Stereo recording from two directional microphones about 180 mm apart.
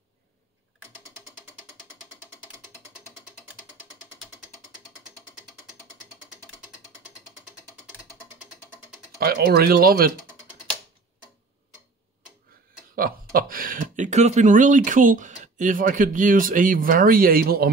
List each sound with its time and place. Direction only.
9.2 s speech: 60° right (ahead or behind)
12.9 s speech: 55° right (ahead or behind)